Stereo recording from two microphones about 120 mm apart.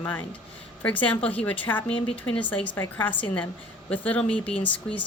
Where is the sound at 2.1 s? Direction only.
45° left (ahead or behind).